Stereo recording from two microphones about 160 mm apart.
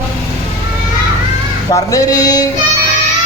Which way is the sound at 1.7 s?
20° left (ahead or behind).